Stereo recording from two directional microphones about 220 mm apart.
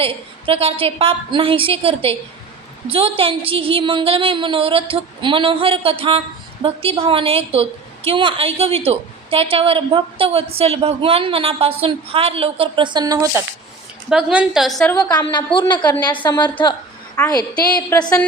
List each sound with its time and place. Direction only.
0.0 s a woman's voice: 25° right (ahead or behind)
14.1 s a woman's voice: 5° right (ahead or behind)
15.0 s a woman's voice: 20° left (ahead or behind)